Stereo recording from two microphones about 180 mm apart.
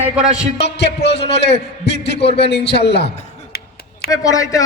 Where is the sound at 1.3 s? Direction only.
70° left (ahead or behind).